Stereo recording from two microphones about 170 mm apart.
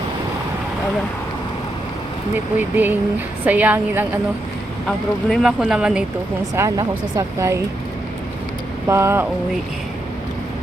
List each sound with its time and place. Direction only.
2.3 s speech: 10° right (ahead or behind)
4.9 s speech: centre (ahead or behind)
6.6 s speech: 20° right (ahead or behind)
8.9 s speech: 15° right (ahead or behind)